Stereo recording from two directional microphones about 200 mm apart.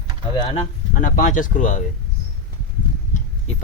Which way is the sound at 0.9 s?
40° left (ahead or behind).